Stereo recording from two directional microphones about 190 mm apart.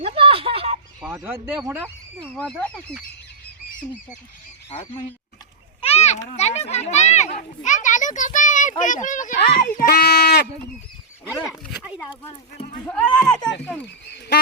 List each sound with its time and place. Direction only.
0.0 s a sound: 30° right (ahead or behind)
1.1 s speech: 10° right (ahead or behind)
2.3 s speech: 5° left (ahead or behind)
5.8 s a child's voice: 35° left (ahead or behind); by 10.4 s 55° left (ahead or behind)
11.4 s speech: 5° right (ahead or behind)
13.1 s speech: 5° left (ahead or behind)